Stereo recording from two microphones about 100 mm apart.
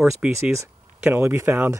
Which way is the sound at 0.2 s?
10° right (ahead or behind).